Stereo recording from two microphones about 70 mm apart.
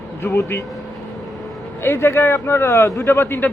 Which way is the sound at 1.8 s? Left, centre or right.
Left.